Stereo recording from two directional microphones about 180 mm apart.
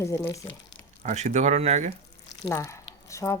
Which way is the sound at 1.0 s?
40° right (ahead or behind).